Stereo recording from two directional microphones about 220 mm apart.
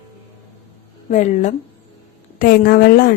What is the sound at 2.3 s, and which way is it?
Speech, 40° left (ahead or behind).